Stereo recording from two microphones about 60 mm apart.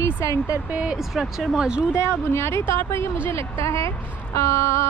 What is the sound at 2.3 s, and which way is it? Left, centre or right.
Speech, left.